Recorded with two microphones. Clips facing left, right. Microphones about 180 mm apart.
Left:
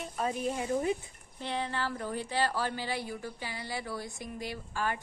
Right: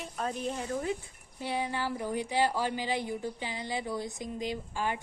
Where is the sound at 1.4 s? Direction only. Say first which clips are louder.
Right 1 dB; 10° right (ahead or behind).